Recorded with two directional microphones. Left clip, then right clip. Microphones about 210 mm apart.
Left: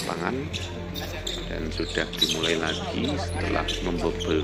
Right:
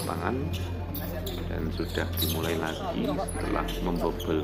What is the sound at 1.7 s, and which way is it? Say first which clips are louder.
Speech: left 7 dB; centre (ahead or behind).